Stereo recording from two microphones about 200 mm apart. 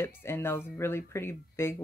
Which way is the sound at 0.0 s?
10° left (ahead or behind).